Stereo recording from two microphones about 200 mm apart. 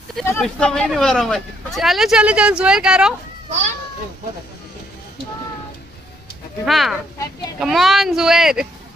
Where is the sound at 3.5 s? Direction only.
35° right (ahead or behind).